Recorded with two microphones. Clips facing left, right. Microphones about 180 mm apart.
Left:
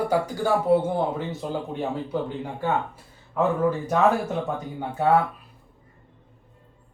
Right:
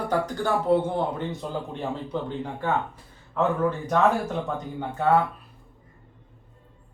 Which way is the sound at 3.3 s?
5° left (ahead or behind).